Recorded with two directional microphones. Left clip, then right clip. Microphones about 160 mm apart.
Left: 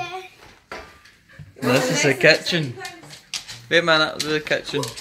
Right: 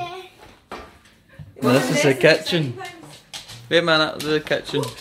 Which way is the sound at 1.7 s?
10° right (ahead or behind).